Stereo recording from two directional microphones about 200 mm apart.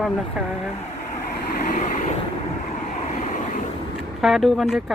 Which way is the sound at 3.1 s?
40° left (ahead or behind).